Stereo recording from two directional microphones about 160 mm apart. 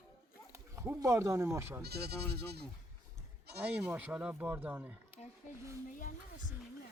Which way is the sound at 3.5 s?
90° right.